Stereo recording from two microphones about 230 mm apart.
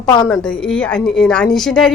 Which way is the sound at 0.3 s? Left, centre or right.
Centre.